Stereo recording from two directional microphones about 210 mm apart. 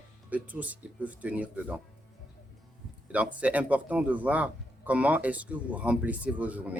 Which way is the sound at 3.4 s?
5° right (ahead or behind).